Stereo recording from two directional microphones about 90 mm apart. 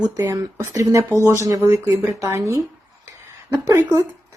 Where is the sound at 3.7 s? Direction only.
35° right (ahead or behind).